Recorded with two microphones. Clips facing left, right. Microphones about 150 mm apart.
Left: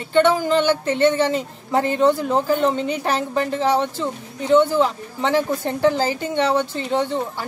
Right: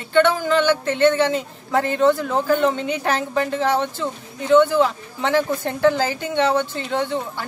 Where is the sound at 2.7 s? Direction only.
5° left (ahead or behind).